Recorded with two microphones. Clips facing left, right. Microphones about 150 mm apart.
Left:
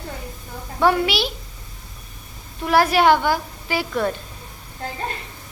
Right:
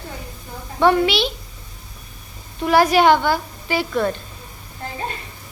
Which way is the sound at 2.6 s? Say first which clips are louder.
Right 2 dB; centre (ahead or behind).